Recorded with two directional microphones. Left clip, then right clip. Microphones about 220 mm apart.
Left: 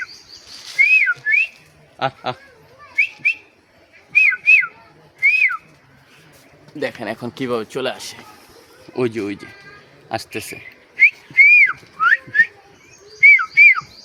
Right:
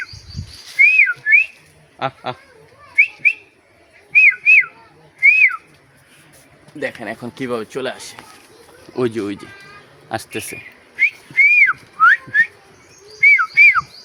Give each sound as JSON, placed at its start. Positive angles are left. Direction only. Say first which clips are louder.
{"t": 0.8, "sound": "whistling", "louder": "right 2 dB", "side_deg": 15}
{"t": 2.0, "sound": "a man's voice", "louder": "left 1 dB", "side_deg": 10}
{"t": 2.9, "sound": "whistling", "louder": "right 4 dB", "side_deg": 15}
{"t": 6.7, "sound": "speech", "louder": "left 1 dB", "side_deg": 20}
{"t": 8.9, "sound": "speech", "louder": "right 1 dB", "side_deg": 0}
{"t": 10.5, "sound": "whistling", "louder": "right 1 dB", "side_deg": -5}
{"t": 13.1, "sound": "bird", "louder": "left 1 dB", "side_deg": -10}